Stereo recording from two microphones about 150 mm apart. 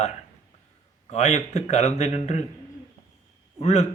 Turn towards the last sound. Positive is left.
turn(degrees=45)  # may be behind; listen again after turning